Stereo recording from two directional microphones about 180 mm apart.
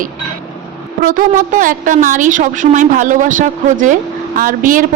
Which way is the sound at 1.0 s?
45° right (ahead or behind).